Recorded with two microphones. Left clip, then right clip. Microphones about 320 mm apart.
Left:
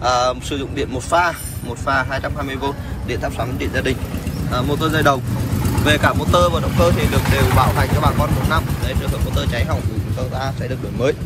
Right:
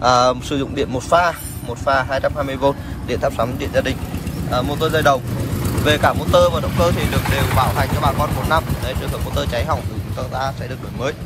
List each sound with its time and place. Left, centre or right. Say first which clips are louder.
0.0 s speech: right 3 dB; centre